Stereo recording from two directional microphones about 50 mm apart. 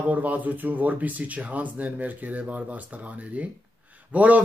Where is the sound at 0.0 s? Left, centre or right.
Right.